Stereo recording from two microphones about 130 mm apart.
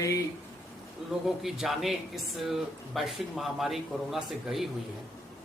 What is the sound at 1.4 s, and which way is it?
Speech, centre (ahead or behind).